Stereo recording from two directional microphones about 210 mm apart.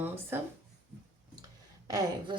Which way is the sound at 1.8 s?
15° right (ahead or behind).